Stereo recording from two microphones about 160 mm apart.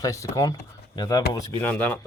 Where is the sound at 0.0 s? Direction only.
20° left (ahead or behind).